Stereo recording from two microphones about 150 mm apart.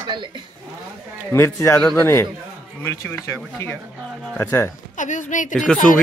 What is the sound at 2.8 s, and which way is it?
Speech, 15° left (ahead or behind).